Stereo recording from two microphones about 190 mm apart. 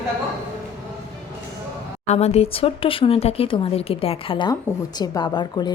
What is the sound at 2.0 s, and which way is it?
Speech, 35° left (ahead or behind).